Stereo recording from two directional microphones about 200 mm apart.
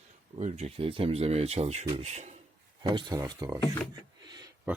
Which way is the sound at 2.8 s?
20° right (ahead or behind).